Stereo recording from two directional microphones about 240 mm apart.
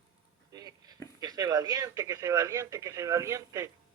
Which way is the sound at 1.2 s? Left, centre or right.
Centre.